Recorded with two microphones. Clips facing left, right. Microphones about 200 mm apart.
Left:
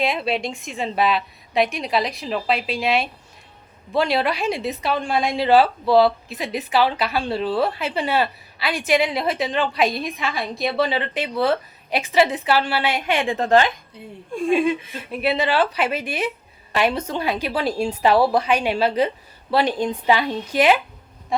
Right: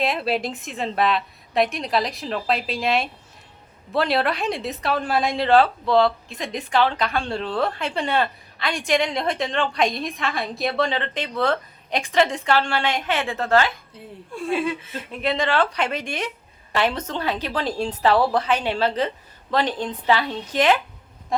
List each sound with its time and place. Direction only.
0.0 s a woman's voice: centre (ahead or behind)